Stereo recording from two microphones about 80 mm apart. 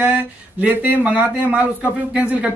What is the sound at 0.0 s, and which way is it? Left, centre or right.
Speech, centre.